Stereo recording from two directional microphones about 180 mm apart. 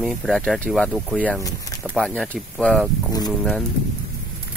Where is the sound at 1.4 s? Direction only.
20° left (ahead or behind).